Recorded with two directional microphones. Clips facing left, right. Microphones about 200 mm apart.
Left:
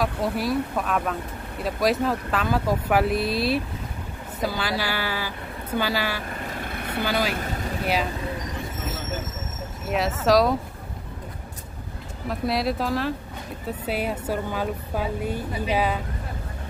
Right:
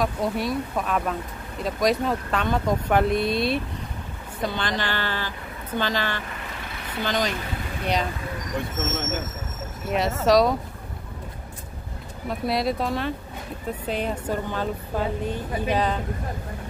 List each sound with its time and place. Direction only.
0.0 s a woman's voice: centre (ahead or behind)
6.3 s vehicle: 45° left (ahead or behind)
7.0 s a woman's voice: 10° left (ahead or behind)
9.8 s speech: centre (ahead or behind)
12.3 s a woman's voice: centre (ahead or behind)